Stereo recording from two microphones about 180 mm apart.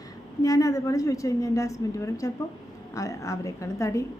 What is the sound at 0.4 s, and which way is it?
A woman's voice, 20° left (ahead or behind).